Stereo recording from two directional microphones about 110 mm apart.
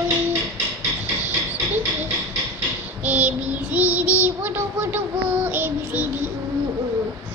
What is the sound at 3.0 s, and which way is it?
Child singing, 15° right (ahead or behind).